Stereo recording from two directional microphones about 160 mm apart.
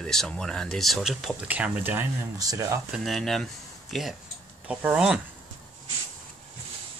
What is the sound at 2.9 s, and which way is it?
Speech, centre (ahead or behind).